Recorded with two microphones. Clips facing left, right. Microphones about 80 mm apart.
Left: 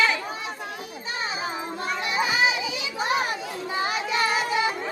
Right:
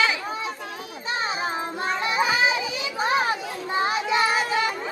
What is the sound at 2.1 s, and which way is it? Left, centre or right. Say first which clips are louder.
Children playing: right 1 dB; right.